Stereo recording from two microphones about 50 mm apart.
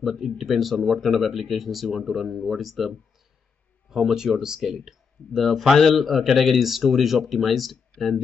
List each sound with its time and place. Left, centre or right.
0.1 s speech: centre
7.9 s speech: centre